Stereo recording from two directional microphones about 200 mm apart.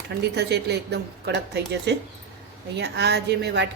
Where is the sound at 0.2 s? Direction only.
55° right (ahead or behind).